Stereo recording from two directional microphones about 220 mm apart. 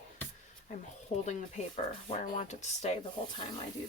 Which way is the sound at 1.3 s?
30° left (ahead or behind).